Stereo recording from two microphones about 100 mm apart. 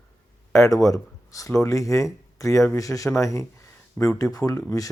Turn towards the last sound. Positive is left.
turn(degrees=35)  # may be behind; listen again after turning